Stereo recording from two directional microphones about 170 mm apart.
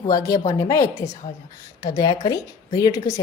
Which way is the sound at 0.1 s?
20° left (ahead or behind).